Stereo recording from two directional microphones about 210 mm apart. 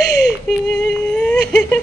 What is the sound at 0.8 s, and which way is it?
Speech, 5° left (ahead or behind).